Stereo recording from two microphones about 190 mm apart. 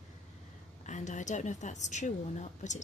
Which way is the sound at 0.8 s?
40° left (ahead or behind).